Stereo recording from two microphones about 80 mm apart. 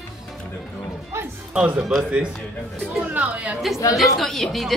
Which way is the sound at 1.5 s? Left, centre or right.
Centre.